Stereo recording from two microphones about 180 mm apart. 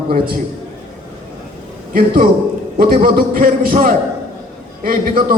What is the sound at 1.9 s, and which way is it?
A man's voice, 55° right (ahead or behind).